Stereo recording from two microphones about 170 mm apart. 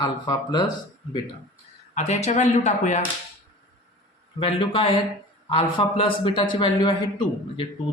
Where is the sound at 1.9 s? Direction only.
40° left (ahead or behind).